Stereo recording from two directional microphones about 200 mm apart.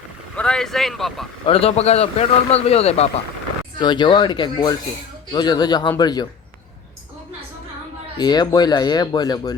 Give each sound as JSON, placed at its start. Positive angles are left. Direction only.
{"t": 0.3, "sound": "speech", "side_deg": 5}
{"t": 1.5, "sound": "a man's voice", "side_deg": 30}
{"t": 8.2, "sound": "speech", "side_deg": 20}